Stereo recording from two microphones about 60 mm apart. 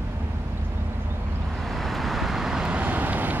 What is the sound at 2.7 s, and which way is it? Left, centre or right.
Vehicle, right.